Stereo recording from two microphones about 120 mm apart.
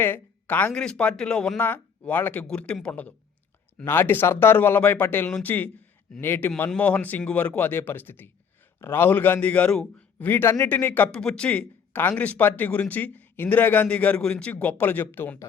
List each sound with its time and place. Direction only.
0.0 s speech: 15° left (ahead or behind)